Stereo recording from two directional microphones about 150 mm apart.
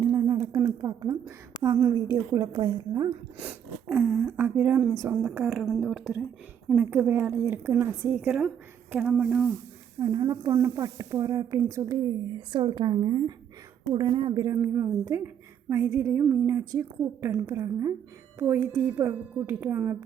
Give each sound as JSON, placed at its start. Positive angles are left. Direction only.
{"t": 0.0, "sound": "a sound", "side_deg": -25}
{"t": 1.6, "sound": "a woman's voice", "side_deg": -20}
{"t": 3.8, "sound": "speech", "side_deg": -15}
{"t": 4.9, "sound": "a woman's voice", "side_deg": -20}
{"t": 5.3, "sound": "speech", "side_deg": -5}
{"t": 8.1, "sound": "speech", "side_deg": -5}
{"t": 10.0, "sound": "a woman's voice", "side_deg": -25}
{"t": 12.5, "sound": "a woman's voice", "side_deg": -35}
{"t": 14.6, "sound": "a woman's voice", "side_deg": -15}